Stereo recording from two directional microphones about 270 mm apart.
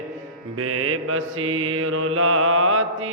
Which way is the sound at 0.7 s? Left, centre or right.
Right.